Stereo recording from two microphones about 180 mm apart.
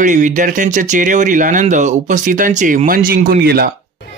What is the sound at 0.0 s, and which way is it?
Speech, 45° right (ahead or behind).